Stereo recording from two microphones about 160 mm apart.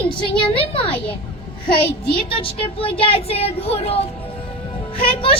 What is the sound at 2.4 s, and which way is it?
A woman's voice, 35° left (ahead or behind).